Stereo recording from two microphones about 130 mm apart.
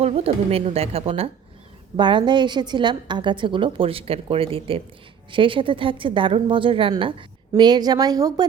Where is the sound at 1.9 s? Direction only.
35° right (ahead or behind).